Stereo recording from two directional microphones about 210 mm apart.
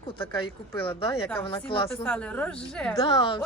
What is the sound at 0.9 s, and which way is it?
Speech, 25° left (ahead or behind).